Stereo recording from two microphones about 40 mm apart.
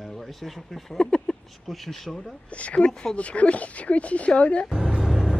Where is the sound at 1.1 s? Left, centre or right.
Centre.